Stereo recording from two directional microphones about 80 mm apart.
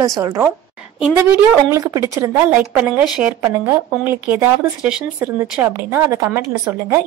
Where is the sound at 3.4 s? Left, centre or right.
Right.